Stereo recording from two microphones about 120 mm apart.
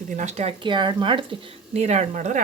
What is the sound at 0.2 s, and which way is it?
Speech, 70° right (ahead or behind).